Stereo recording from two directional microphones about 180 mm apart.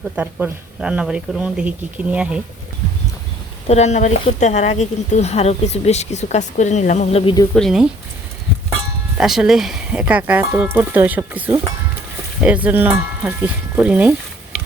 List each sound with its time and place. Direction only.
0.2 s speech: 5° right (ahead or behind)
3.7 s speech: 40° left (ahead or behind)
7.5 s speech: centre (ahead or behind)
9.1 s speech: 5° right (ahead or behind)